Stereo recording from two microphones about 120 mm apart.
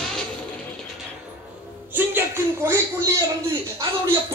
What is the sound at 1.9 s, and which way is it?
Speech, 20° right (ahead or behind).